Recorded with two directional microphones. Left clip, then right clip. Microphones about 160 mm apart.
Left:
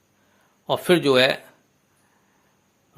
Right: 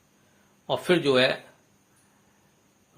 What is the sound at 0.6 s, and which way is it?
Speech, 30° left (ahead or behind).